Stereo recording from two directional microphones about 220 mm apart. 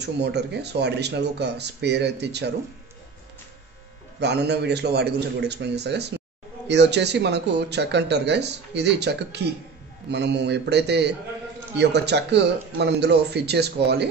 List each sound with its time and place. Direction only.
0.0 s speech: 50° right (ahead or behind)
4.2 s speech: 50° right (ahead or behind)